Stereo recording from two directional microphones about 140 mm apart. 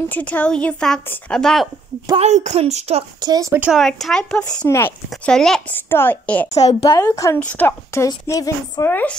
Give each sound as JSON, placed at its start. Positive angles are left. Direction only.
{"t": 0.1, "sound": "speech", "side_deg": 10}
{"t": 2.1, "sound": "speech", "side_deg": -55}
{"t": 3.2, "sound": "speech", "side_deg": -25}
{"t": 3.5, "sound": "speech", "side_deg": -10}
{"t": 3.8, "sound": "speech", "side_deg": 5}
{"t": 4.6, "sound": "speech", "side_deg": 20}
{"t": 5.1, "sound": "speech", "side_deg": 5}
{"t": 6.5, "sound": "a woman's voice", "side_deg": 50}
{"t": 6.8, "sound": "speech", "side_deg": 25}
{"t": 7.3, "sound": "speech", "side_deg": 10}
{"t": 8.1, "sound": "speech", "side_deg": 25}